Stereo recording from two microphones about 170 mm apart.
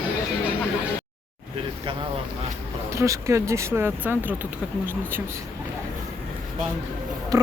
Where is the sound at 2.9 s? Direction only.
15° right (ahead or behind).